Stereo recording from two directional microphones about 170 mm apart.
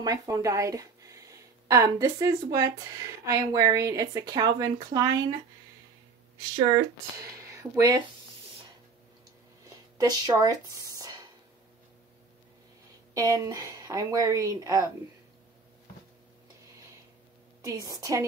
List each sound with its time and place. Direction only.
0.0 s speech: 20° right (ahead or behind)
7.2 s speech: 20° right (ahead or behind)
9.7 s a sound: 20° right (ahead or behind)
13.1 s speech: 20° right (ahead or behind)
17.6 s speech: 20° right (ahead or behind)